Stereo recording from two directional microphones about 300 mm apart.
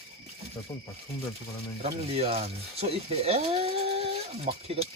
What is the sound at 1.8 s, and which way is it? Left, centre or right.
Speech, centre.